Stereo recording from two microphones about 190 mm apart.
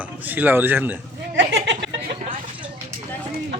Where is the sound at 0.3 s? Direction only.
10° right (ahead or behind).